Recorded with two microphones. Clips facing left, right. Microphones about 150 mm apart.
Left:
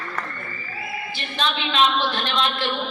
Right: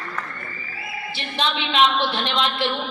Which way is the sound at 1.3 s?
25° right (ahead or behind).